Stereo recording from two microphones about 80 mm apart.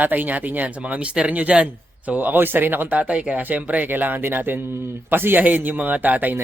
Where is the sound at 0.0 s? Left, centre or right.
Right.